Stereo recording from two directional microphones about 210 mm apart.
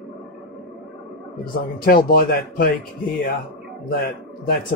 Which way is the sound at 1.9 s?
45° left (ahead or behind).